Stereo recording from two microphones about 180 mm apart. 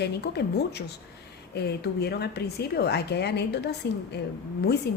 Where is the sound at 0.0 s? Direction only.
65° left (ahead or behind).